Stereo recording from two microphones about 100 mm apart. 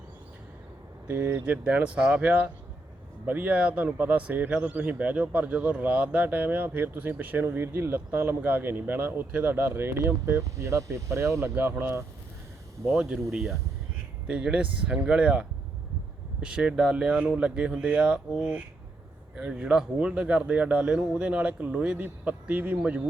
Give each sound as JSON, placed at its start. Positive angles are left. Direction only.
{"t": 1.0, "sound": "speech", "side_deg": -15}
{"t": 12.9, "sound": "speech", "side_deg": -5}
{"t": 19.4, "sound": "speech", "side_deg": -10}